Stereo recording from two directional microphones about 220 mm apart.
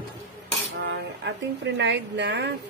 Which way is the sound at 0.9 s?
55° right (ahead or behind).